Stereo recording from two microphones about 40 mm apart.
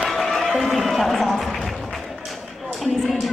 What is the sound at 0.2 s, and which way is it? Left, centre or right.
Music, centre.